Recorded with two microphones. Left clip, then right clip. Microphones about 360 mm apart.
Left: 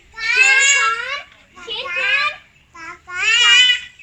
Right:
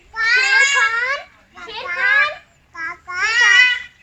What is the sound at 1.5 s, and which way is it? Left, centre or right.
Children playing, centre.